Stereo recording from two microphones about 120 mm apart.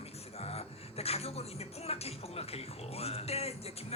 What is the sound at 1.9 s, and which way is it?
Speech, 60° left (ahead or behind).